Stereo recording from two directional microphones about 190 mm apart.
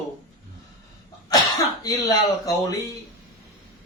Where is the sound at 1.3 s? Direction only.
20° left (ahead or behind).